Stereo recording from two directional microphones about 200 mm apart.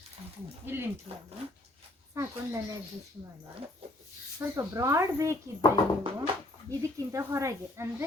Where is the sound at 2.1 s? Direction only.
15° right (ahead or behind).